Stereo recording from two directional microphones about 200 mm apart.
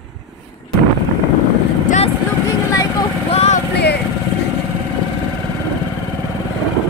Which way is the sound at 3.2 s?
35° left (ahead or behind).